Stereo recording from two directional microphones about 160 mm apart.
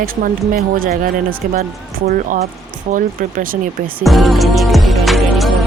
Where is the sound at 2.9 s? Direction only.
50° right (ahead or behind).